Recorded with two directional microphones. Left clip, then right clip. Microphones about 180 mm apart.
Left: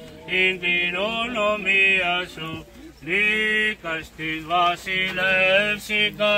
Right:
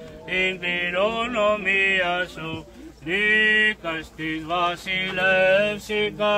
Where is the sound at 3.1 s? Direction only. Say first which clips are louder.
Right 2 dB; 40° right (ahead or behind).